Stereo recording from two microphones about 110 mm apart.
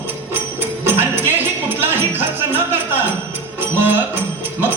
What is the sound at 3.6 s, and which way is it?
Music, 20° right (ahead or behind).